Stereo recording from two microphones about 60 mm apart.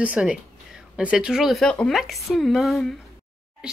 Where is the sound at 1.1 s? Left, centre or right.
Centre.